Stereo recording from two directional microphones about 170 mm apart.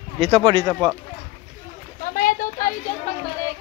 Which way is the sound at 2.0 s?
55° left (ahead or behind).